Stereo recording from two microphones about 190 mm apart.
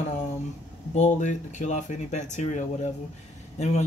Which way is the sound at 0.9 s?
40° left (ahead or behind).